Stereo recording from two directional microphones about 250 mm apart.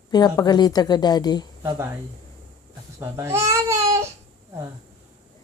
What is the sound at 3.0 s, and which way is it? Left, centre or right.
Babbling, centre.